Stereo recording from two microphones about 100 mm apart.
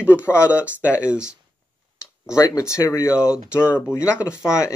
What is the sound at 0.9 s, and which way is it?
Speech, 10° right (ahead or behind).